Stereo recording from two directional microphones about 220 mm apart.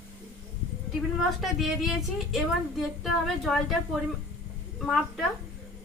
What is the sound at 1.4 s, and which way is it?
A woman's voice, centre (ahead or behind).